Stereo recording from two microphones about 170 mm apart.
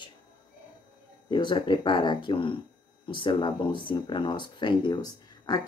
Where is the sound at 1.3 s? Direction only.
25° left (ahead or behind).